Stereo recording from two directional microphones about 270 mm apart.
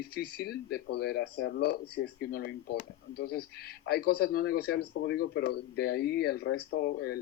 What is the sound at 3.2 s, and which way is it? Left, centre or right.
Speech, left.